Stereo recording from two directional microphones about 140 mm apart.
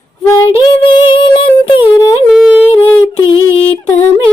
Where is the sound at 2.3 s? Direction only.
5° right (ahead or behind).